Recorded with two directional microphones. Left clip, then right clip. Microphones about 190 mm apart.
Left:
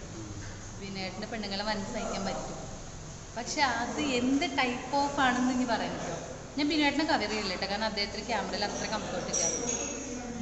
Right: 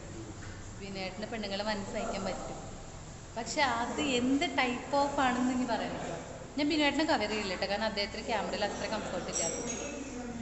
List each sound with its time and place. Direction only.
0.9 s a woman's voice: 15° right (ahead or behind)
3.3 s a woman's voice: 15° right (ahead or behind)